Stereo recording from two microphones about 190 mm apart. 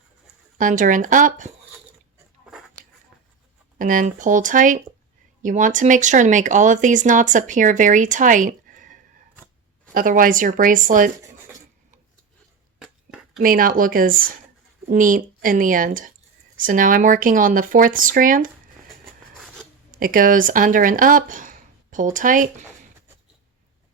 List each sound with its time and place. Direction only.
0.6 s speech: 45° right (ahead or behind)
3.8 s speech: 45° right (ahead or behind)
12.8 s a sound: 5° right (ahead or behind)
13.4 s speech: 50° right (ahead or behind)
19.9 s speech: 45° right (ahead or behind)